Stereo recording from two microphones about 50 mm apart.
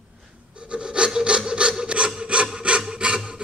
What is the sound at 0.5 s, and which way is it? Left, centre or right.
Filing, right.